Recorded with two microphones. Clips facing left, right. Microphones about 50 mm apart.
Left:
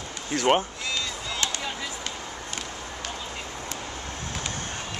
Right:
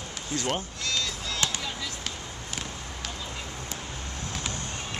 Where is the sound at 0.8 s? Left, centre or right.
Centre.